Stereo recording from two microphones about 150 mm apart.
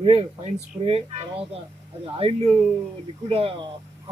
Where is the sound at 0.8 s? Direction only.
40° right (ahead or behind).